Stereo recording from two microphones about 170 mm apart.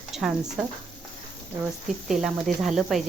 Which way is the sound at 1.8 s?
Centre (ahead or behind).